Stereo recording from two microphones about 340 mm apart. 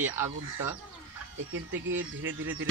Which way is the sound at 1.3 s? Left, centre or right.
Right.